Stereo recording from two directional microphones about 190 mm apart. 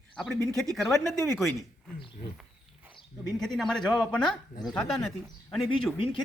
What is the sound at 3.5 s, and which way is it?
Speech, centre (ahead or behind).